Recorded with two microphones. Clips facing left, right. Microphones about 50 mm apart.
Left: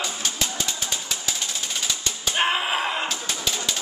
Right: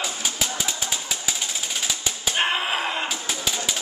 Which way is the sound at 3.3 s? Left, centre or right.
Centre.